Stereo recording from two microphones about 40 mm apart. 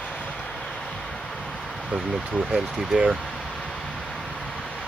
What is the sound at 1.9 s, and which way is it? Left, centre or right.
Speech, right.